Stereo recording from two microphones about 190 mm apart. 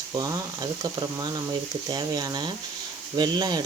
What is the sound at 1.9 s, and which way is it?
Speech, 20° right (ahead or behind).